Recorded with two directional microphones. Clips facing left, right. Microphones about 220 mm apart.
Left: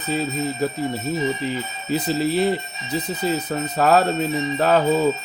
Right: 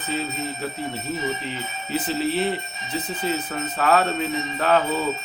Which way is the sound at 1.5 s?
40° left (ahead or behind).